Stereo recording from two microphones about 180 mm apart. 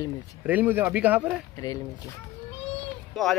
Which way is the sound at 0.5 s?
10° right (ahead or behind).